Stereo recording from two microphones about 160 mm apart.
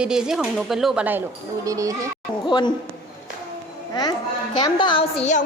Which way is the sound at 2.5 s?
30° left (ahead or behind).